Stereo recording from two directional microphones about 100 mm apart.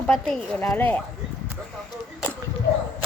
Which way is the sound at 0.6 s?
25° left (ahead or behind).